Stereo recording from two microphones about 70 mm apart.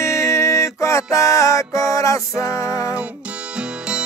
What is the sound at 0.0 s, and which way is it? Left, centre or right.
Music, left.